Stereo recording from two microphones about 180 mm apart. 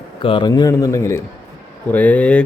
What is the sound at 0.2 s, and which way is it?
Speech, 25° left (ahead or behind).